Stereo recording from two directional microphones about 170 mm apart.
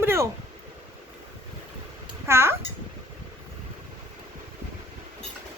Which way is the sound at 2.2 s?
15° right (ahead or behind).